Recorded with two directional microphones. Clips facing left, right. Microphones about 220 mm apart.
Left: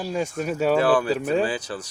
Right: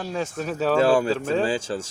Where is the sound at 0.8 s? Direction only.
25° right (ahead or behind).